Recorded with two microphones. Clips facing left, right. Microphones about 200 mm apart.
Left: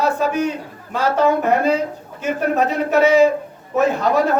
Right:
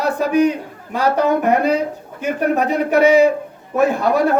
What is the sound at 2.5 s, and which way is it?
Speech, 15° right (ahead or behind).